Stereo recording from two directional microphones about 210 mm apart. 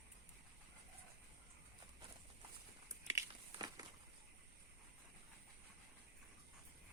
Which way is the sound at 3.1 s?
15° right (ahead or behind).